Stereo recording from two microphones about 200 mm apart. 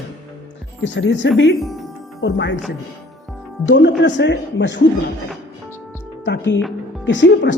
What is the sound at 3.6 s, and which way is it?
Speech, 65° left (ahead or behind).